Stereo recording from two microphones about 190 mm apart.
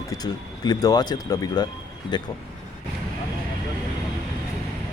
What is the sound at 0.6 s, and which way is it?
Speech, 20° left (ahead or behind).